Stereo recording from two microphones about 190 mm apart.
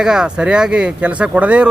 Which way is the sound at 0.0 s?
5° right (ahead or behind).